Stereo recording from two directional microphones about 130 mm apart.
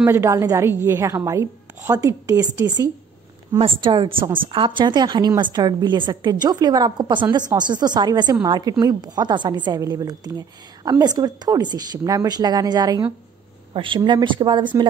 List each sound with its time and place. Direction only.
0.0 s a woman's voice: 20° right (ahead or behind)
3.5 s a woman's voice: 45° right (ahead or behind)